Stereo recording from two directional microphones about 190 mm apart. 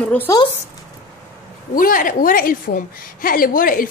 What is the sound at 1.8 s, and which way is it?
Speech, 45° left (ahead or behind).